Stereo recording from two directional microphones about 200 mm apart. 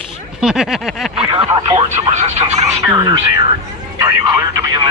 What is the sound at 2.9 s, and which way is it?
Speech, 20° right (ahead or behind).